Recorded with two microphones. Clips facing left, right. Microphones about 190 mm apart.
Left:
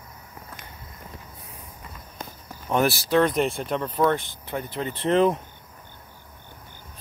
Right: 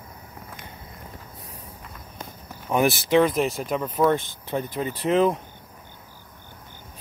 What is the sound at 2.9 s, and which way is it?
Speech, 15° right (ahead or behind).